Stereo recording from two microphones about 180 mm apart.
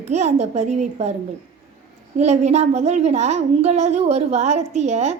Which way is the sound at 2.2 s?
35° right (ahead or behind).